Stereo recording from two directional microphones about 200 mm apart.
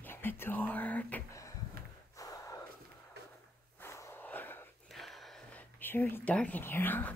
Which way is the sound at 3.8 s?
10° left (ahead or behind).